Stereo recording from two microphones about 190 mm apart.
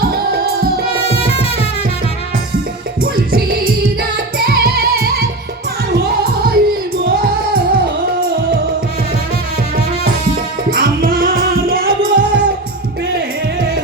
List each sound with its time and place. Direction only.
0.0 s music: 55° right (ahead or behind)
1.1 s music: 30° left (ahead or behind)
3.0 s music: 50° right (ahead or behind)
10.7 s music: 50° right (ahead or behind)